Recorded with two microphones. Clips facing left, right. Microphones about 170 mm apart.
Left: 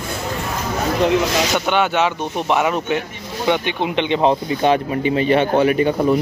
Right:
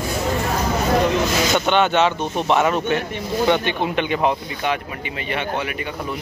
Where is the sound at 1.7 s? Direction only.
10° left (ahead or behind); by 6.1 s 35° left (ahead or behind).